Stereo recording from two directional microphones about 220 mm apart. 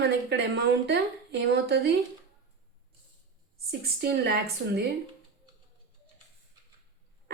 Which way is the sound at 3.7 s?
45° right (ahead or behind).